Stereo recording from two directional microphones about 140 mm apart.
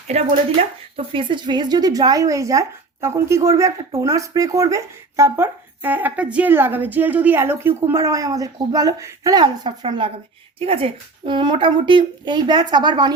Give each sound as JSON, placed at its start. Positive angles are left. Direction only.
{"t": 0.1, "sound": "speech", "side_deg": -50}
{"t": 0.9, "sound": "speech", "side_deg": -35}